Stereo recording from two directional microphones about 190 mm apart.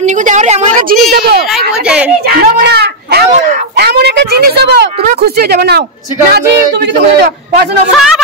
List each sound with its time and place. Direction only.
0.3 s a woman's voice: 35° right (ahead or behind)
1.1 s a child's voice: 50° right (ahead or behind)
1.9 s speech: 5° right (ahead or behind)
2.4 s speech: 60° right (ahead or behind)